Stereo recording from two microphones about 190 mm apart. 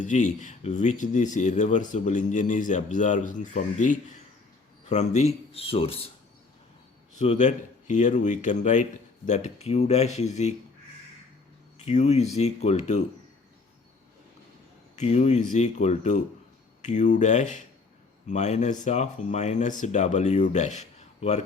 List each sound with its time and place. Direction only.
0.0 s speech: 40° left (ahead or behind)
7.2 s speech: 40° left (ahead or behind)
11.9 s speech: 35° left (ahead or behind)
14.9 s speech: 35° left (ahead or behind)